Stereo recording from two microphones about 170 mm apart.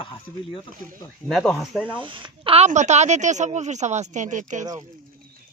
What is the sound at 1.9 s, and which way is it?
Speech, 30° right (ahead or behind).